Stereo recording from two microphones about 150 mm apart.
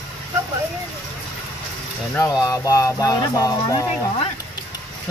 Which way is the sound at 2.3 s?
25° left (ahead or behind).